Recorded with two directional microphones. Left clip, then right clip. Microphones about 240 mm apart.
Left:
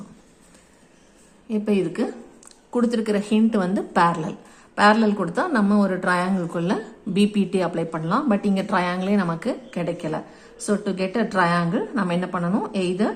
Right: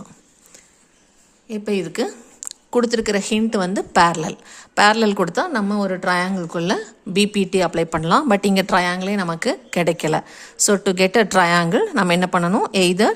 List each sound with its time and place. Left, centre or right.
1.5 s a woman's voice: right